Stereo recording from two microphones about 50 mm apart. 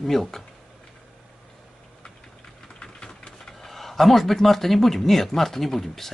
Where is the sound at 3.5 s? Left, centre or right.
Centre.